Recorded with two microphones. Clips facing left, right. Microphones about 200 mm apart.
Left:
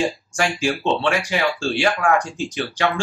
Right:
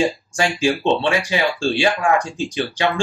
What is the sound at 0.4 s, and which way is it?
Speech, 15° right (ahead or behind).